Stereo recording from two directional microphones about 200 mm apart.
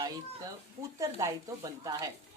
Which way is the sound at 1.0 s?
15° right (ahead or behind).